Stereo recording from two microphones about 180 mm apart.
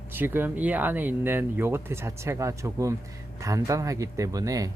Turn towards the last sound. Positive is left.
turn(degrees=-20)  # may be behind; listen again after turning